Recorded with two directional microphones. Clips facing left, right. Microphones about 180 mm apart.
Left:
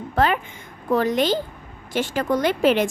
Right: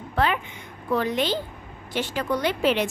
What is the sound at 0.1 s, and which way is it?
A woman's voice, 45° left (ahead or behind).